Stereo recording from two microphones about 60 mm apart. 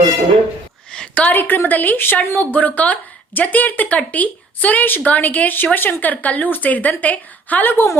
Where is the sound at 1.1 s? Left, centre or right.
Left.